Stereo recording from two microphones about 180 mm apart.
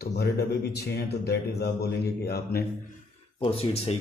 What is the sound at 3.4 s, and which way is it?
Speech, 30° left (ahead or behind).